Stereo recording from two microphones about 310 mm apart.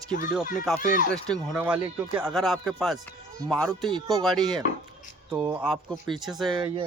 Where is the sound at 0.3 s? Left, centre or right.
Centre.